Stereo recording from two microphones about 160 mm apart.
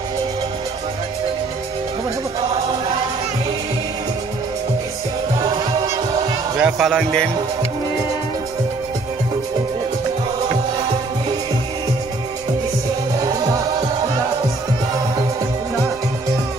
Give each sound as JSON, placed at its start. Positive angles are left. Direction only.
{"t": 5.5, "sound": "music", "side_deg": -25}
{"t": 6.6, "sound": "speech", "side_deg": 0}
{"t": 13.2, "sound": "music", "side_deg": -20}